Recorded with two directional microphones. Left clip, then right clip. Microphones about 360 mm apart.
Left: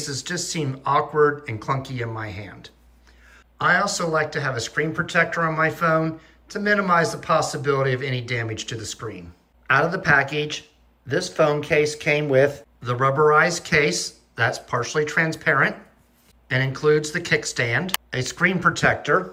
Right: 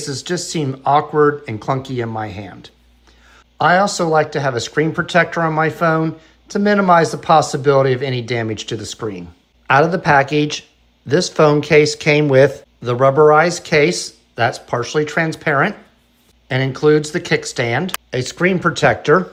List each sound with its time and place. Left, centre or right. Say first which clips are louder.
0.0 s speech: right 5 dB; centre